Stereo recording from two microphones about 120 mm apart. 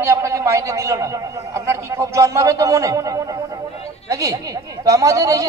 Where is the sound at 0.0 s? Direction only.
25° right (ahead or behind).